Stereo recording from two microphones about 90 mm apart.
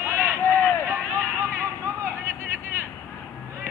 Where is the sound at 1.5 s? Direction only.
30° right (ahead or behind).